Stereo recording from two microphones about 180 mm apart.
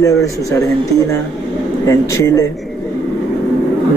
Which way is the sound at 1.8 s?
15° left (ahead or behind).